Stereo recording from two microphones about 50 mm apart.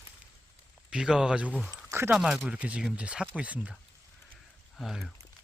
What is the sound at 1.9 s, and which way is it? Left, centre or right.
Speech, right.